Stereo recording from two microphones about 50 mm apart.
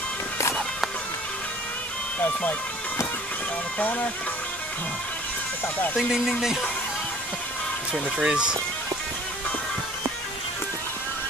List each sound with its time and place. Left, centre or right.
3.8 s speech: left
5.9 s speech: centre
8.2 s speech: centre